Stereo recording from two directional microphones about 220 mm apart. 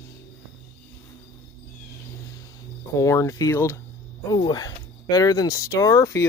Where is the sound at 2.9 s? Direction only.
15° left (ahead or behind).